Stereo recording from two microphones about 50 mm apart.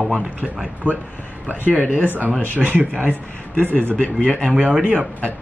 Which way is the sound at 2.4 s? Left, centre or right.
Right.